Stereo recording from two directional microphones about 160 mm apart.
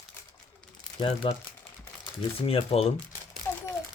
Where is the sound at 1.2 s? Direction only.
35° left (ahead or behind).